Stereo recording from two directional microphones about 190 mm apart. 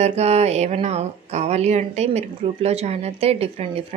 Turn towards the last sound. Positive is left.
turn(degrees=-30)  # may be behind; listen again after turning